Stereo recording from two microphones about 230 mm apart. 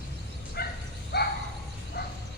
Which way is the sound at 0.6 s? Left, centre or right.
Left.